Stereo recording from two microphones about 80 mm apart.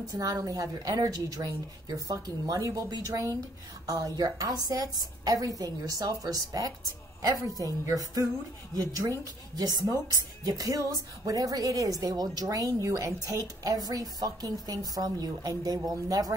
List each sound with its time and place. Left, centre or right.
0.1 s a woman's voice: right